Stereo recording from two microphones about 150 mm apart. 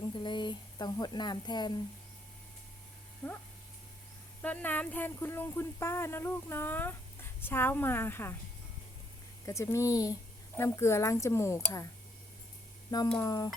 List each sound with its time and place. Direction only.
0.1 s speech: 30° left (ahead or behind)
4.4 s speech: 10° left (ahead or behind)
9.5 s speech: 20° left (ahead or behind)
13.1 s speech: 25° left (ahead or behind)